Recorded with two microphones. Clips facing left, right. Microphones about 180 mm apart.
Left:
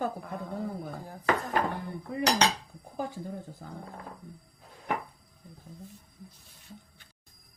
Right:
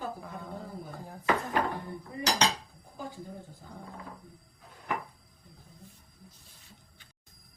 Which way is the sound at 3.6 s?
60° left (ahead or behind).